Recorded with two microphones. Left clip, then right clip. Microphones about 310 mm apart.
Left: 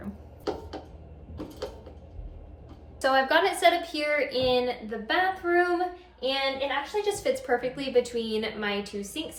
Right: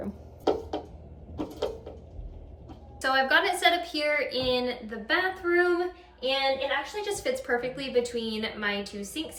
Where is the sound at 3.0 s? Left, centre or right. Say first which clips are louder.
Left 1 dB; centre.